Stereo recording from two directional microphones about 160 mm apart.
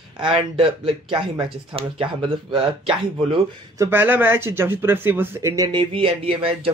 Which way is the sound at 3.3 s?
20° right (ahead or behind).